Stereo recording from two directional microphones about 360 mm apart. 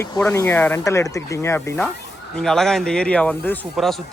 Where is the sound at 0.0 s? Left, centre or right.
Centre.